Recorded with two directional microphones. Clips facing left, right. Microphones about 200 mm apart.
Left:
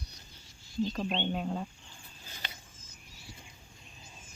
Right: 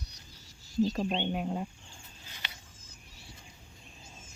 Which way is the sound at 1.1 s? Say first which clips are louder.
Right 1 dB; 10° right (ahead or behind).